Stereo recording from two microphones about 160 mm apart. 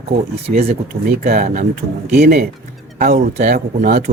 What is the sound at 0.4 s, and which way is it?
Speech, 40° right (ahead or behind).